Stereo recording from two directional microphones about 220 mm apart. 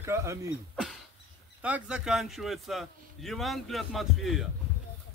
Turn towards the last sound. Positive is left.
turn(degrees=0)  # may be behind; listen again after turning